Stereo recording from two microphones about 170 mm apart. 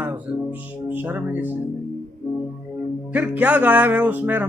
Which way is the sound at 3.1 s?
10° right (ahead or behind).